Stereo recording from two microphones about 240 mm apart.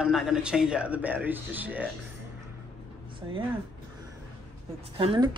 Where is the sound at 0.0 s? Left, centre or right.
Centre.